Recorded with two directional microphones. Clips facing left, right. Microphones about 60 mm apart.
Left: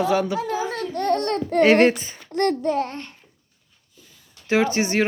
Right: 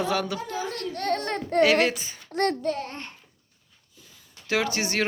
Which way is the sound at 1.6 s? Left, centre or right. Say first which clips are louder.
Left 5 dB; left.